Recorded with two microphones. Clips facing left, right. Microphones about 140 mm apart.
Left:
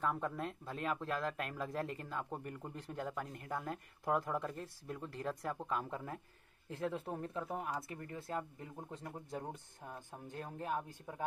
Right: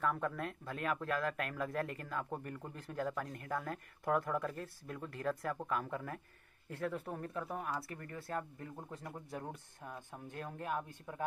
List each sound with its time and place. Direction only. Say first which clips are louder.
0.0 s speech: right 1 dB; 25° left (ahead or behind)